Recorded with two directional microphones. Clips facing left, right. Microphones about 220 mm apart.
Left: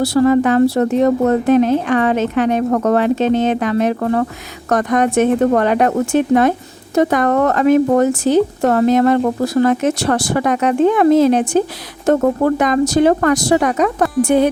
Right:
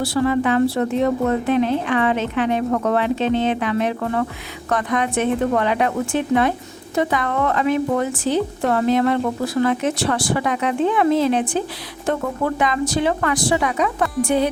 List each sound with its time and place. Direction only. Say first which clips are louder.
0.0 s a woman's voice: left 6 dB; 40° left (ahead or behind)